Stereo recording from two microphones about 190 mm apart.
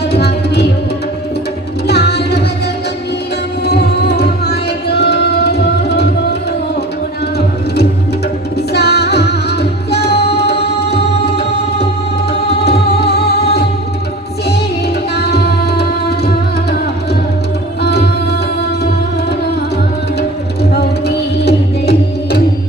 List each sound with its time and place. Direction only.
0.1 s music: 60° left (ahead or behind)
1.9 s music: 60° left (ahead or behind)
3.7 s tabla: 60° left (ahead or behind)
8.7 s music: 60° left (ahead or behind)
12.6 s music: 60° left (ahead or behind)
15.1 s music: 60° left (ahead or behind)
17.8 s music: 60° left (ahead or behind)
21.4 s music: 60° left (ahead or behind)